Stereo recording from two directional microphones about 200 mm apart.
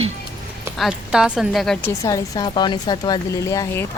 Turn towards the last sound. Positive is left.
turn(degrees=15)  # may be behind; listen again after turning